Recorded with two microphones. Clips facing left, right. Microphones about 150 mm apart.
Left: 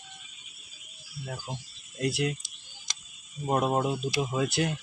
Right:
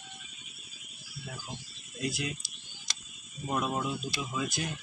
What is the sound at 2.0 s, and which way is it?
Speech, 65° left (ahead or behind).